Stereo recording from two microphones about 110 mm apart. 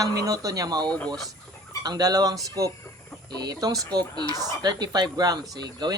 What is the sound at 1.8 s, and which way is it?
Speech, 35° right (ahead or behind).